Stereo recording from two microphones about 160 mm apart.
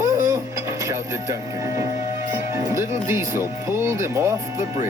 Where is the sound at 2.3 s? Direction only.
15° right (ahead or behind).